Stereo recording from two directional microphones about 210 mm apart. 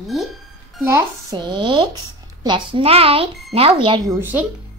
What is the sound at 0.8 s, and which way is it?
Speech, 15° right (ahead or behind).